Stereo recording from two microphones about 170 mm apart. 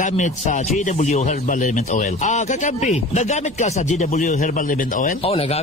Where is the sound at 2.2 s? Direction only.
45° left (ahead or behind).